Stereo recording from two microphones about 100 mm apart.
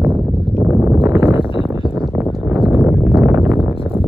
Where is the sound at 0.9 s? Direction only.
Centre (ahead or behind).